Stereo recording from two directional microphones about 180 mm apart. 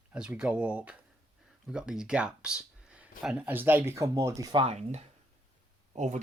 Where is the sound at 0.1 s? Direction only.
5° right (ahead or behind).